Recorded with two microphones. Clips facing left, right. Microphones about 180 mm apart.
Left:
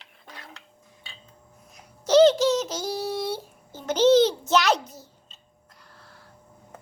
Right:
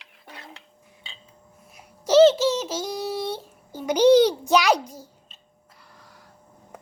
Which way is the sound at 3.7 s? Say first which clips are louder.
Right 2 dB; 10° right (ahead or behind).